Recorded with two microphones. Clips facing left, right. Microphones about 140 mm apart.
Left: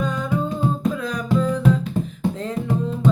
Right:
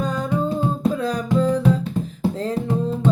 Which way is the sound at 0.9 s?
35° right (ahead or behind).